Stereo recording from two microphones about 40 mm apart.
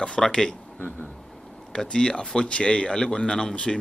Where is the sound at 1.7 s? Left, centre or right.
Centre.